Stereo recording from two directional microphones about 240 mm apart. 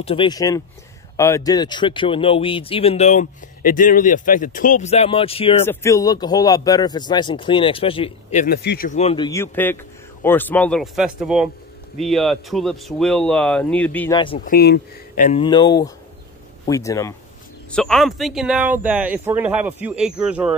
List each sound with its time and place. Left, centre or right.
0.0 s speech: left
5.7 s speech: centre
14.4 s speech: left
15.4 s speech: centre
17.6 s speech: centre